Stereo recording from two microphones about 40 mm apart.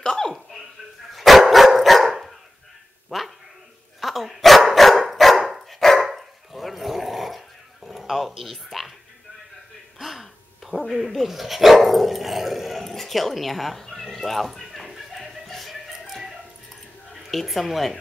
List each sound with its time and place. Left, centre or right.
0.0 s a sound: centre
1.1 s dog: centre
3.1 s a sound: centre
4.0 s dog: centre
9.9 s speech: centre
15.1 s music: centre
17.1 s speech: centre